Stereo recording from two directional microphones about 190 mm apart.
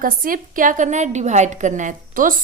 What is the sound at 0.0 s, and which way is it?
A woman's voice, 45° right (ahead or behind).